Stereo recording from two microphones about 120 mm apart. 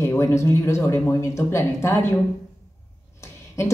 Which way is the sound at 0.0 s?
25° left (ahead or behind).